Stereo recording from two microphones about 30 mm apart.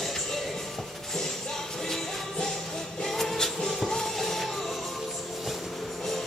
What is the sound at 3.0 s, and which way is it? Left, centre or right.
Music, centre.